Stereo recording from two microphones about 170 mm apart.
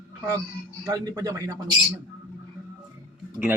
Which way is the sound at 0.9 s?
20° right (ahead or behind).